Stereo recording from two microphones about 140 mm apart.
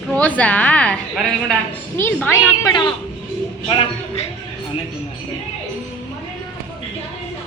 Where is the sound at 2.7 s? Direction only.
35° left (ahead or behind).